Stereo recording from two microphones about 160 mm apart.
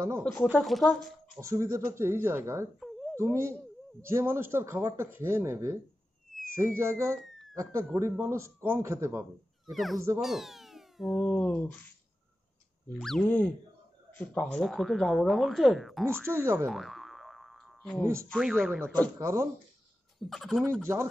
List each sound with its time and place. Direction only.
0.2 s speech: 10° left (ahead or behind)
1.4 s speech: 20° right (ahead or behind)
2.8 s dog: centre (ahead or behind)
3.2 s speech: 15° right (ahead or behind)
9.7 s speech: centre (ahead or behind)
13.0 s speech: 5° left (ahead or behind)
16.1 s speech: 15° right (ahead or behind)
16.6 s boing: centre (ahead or behind)
18.3 s speech: centre (ahead or behind)
19.1 s speech: 20° right (ahead or behind)
20.2 s speech: centre (ahead or behind)
20.8 s speech: 20° right (ahead or behind)